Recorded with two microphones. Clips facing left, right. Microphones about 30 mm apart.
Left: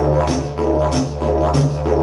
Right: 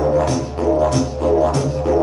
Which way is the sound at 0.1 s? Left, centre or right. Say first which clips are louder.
Even; centre.